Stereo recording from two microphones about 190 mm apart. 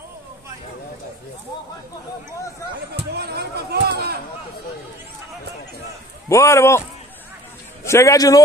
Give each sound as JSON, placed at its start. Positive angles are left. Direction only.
{"t": 3.2, "sound": "speech", "side_deg": -60}
{"t": 6.2, "sound": "a man's voice", "side_deg": 15}
{"t": 7.8, "sound": "a man's voice", "side_deg": 15}